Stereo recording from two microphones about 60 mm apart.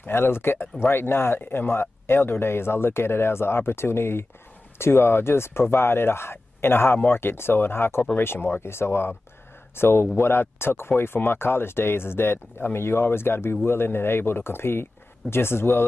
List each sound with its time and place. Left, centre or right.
0.0 s speech: left